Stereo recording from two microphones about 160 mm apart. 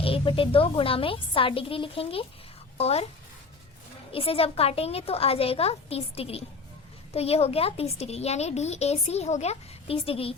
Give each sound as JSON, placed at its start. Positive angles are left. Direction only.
{"t": 0.0, "sound": "a woman's voice", "side_deg": 35}
{"t": 4.1, "sound": "a woman's voice", "side_deg": 35}